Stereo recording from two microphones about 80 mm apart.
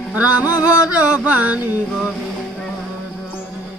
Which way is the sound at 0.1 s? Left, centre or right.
Centre.